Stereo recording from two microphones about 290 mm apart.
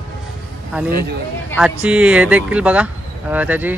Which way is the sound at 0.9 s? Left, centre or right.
Right.